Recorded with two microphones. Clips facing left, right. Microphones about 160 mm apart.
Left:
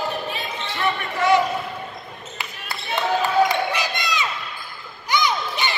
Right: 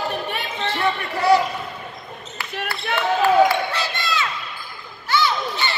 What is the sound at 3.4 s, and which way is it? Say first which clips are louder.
Basketball bounce: right 1 dB; 15° left (ahead or behind).